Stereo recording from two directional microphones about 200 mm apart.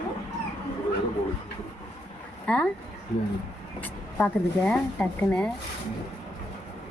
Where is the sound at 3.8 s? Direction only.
5° left (ahead or behind).